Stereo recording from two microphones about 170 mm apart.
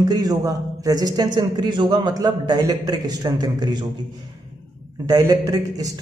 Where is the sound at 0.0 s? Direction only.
20° right (ahead or behind).